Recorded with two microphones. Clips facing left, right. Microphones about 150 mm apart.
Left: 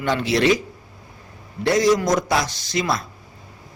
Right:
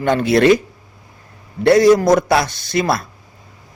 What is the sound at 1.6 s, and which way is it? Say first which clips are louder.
A man's voice: right 7 dB; 60° right (ahead or behind).